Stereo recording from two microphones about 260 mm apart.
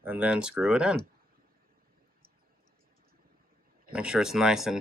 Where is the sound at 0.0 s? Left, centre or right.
Centre.